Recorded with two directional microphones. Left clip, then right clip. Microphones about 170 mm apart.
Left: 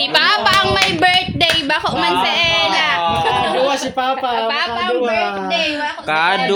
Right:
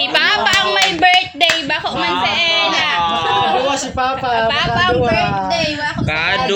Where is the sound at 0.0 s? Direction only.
20° left (ahead or behind).